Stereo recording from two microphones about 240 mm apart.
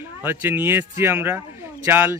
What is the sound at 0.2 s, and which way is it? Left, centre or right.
A man's voice, centre.